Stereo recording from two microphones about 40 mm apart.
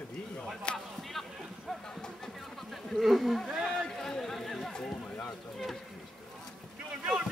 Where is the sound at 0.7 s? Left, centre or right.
Left.